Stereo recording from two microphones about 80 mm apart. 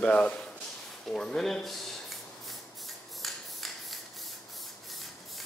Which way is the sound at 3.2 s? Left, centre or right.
Centre.